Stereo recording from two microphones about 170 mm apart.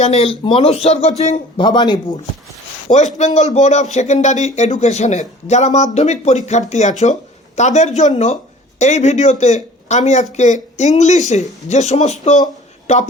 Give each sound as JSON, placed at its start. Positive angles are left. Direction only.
{"t": 0.0, "sound": "speech", "side_deg": 40}
{"t": 3.2, "sound": "speech", "side_deg": 45}